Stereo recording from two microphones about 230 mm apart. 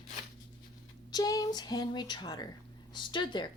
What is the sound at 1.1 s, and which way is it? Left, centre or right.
A woman's voice, centre.